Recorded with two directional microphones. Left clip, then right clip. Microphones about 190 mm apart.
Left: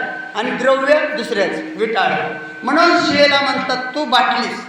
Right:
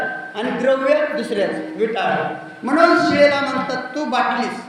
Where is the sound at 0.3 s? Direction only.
10° right (ahead or behind).